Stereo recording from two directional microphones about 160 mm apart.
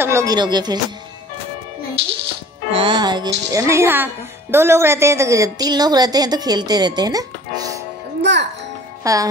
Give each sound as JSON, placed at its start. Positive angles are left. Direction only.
{"t": 0.0, "sound": "speech", "side_deg": -20}
{"t": 2.7, "sound": "speech", "side_deg": -30}
{"t": 8.2, "sound": "a child's voice", "side_deg": -90}
{"t": 9.0, "sound": "music", "side_deg": -20}